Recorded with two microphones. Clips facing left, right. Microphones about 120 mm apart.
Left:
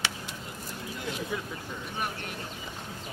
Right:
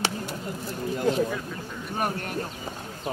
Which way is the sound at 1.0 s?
40° right (ahead or behind).